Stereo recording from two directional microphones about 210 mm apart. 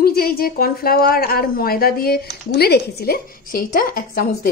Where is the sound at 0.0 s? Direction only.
45° left (ahead or behind).